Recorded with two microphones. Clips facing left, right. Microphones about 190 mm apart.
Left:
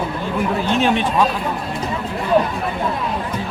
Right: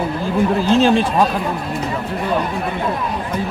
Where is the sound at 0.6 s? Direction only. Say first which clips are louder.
Right 4 dB; 30° right (ahead or behind).